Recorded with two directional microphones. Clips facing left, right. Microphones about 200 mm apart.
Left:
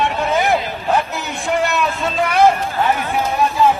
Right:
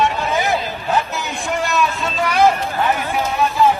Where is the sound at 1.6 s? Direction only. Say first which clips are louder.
Left 1 dB; 60° left (ahead or behind).